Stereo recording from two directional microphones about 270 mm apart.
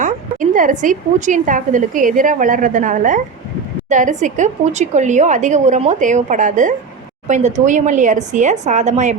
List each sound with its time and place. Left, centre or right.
0.0 s a woman's voice: right